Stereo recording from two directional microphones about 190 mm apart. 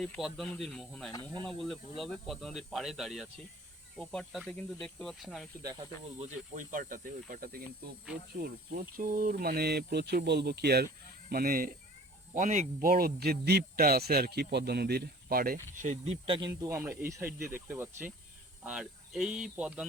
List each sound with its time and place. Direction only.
0.0 s speech: centre (ahead or behind)
6.1 s speech: 40° right (ahead or behind)
12.3 s speech: 40° right (ahead or behind)
16.2 s speech: 25° right (ahead or behind)
17.2 s speech: 50° right (ahead or behind)
17.7 s speech: 10° right (ahead or behind)